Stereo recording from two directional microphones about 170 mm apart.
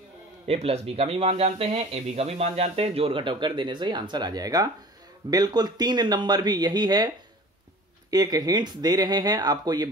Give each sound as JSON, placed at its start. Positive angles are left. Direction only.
{"t": 0.5, "sound": "speech", "side_deg": -35}
{"t": 8.1, "sound": "speech", "side_deg": -20}